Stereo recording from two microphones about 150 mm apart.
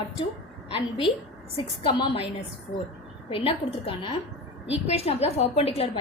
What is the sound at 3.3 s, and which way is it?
A woman's voice, 40° left (ahead or behind).